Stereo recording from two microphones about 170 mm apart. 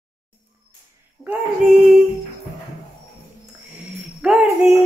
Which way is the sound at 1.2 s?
10° right (ahead or behind).